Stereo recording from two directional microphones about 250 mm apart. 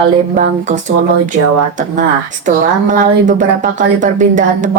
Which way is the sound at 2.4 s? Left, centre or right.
Right.